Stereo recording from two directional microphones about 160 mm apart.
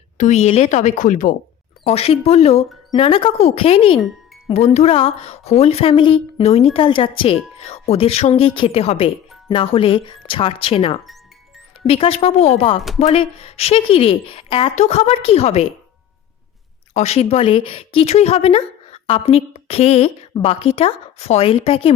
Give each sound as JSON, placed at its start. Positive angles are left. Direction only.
{"t": 0.2, "sound": "speech", "side_deg": 45}
{"t": 1.8, "sound": "speech", "side_deg": 40}
{"t": 16.9, "sound": "speech", "side_deg": 40}